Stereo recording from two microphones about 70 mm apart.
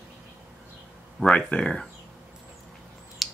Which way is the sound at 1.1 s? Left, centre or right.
Centre.